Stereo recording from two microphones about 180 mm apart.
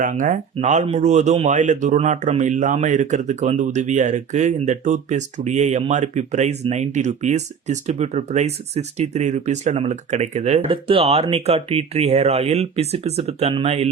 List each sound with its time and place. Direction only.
0.0 s speech: 45° right (ahead or behind)